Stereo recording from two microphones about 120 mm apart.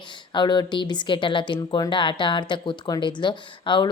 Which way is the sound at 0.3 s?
40° left (ahead or behind).